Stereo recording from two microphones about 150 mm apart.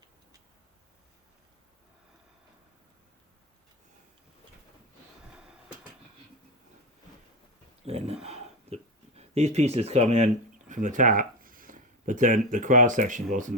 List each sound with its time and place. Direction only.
5.3 s train: 5° right (ahead or behind)
7.9 s speech: 45° right (ahead or behind)
8.2 s a sound: 45° right (ahead or behind)